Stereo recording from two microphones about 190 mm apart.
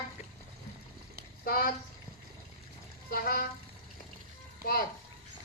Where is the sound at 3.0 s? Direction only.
50° left (ahead or behind).